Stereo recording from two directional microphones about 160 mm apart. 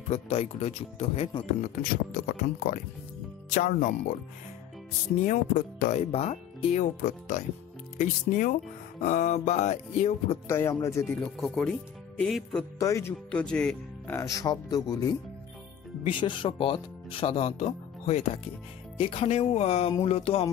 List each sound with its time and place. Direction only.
0.1 s speech: 40° left (ahead or behind)
1.6 s speech: 60° left (ahead or behind)
5.2 s speech: 55° left (ahead or behind)
10.5 s speech: 15° left (ahead or behind)
11.1 s speech: centre (ahead or behind)
12.7 s speech: 20° left (ahead or behind)
13.3 s speech: 5° left (ahead or behind)
14.1 s speech: 20° left (ahead or behind); by 20.4 s 40° left (ahead or behind)